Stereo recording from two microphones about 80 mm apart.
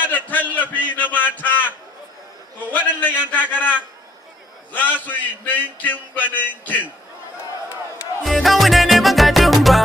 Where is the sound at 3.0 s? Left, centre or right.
Left.